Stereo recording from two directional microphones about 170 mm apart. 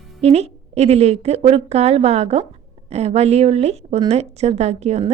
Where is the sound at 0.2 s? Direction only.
40° right (ahead or behind).